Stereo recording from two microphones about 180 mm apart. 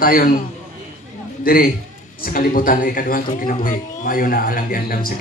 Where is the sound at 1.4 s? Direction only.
55° left (ahead or behind).